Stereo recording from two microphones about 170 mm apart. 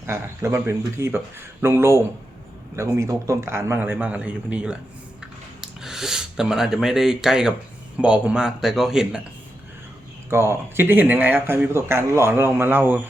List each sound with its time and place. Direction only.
0.0 s speech: 15° right (ahead or behind)
10.2 s speech: 15° right (ahead or behind)